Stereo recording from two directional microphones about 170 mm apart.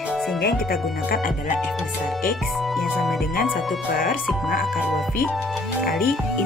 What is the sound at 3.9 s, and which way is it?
Speech, 55° left (ahead or behind).